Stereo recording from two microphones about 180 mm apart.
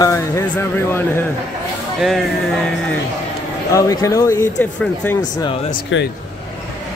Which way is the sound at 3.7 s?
20° left (ahead or behind).